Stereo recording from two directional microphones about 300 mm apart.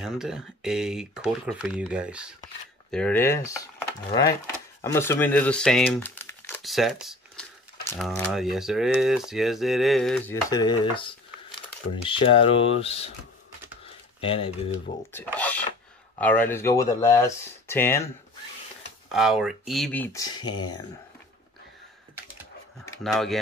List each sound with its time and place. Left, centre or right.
0.0 s speech: centre
13.8 s a sound: centre
15.3 s speech: centre
19.1 s speech: centre
22.8 s speech: centre